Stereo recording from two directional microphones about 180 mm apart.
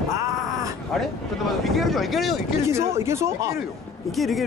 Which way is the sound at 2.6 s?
15° right (ahead or behind).